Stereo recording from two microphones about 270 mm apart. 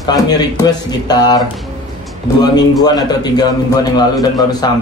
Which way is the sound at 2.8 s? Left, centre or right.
Centre.